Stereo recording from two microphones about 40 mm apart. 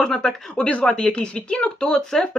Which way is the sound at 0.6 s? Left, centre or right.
Left.